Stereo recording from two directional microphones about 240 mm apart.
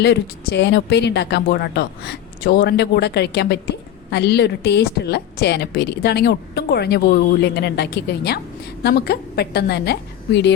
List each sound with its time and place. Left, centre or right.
0.0 s a woman's voice: left